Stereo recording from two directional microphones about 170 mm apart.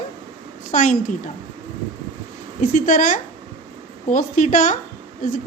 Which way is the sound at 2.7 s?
50° left (ahead or behind).